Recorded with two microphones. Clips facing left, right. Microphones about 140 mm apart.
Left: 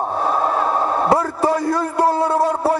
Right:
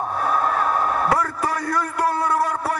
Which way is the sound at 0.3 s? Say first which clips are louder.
Left 2 dB; 25° left (ahead or behind).